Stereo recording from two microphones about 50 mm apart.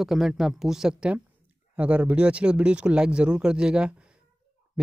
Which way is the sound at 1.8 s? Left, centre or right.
Right.